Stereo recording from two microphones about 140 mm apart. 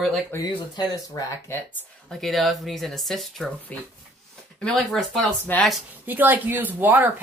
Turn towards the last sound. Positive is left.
turn(degrees=-10)  # may be behind; listen again after turning